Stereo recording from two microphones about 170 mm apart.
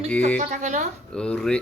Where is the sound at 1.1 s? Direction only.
5° left (ahead or behind).